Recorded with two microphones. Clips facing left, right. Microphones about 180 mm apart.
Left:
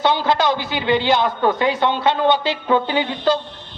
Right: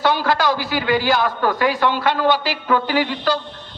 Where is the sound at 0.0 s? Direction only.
20° left (ahead or behind).